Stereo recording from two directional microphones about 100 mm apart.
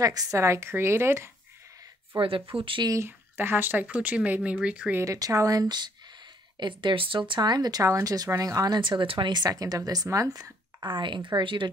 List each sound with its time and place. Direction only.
0.0 s a woman's voice: 35° right (ahead or behind)
2.1 s speech: 60° right (ahead or behind)
2.9 s speech: 25° right (ahead or behind)
4.9 s a woman's voice: 30° right (ahead or behind)
6.6 s speech: 55° right (ahead or behind)
9.3 s a woman's voice: 40° right (ahead or behind)
10.8 s speech: 55° right (ahead or behind)